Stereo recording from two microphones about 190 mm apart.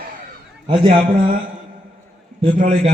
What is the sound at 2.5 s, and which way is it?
Speech, 35° right (ahead or behind).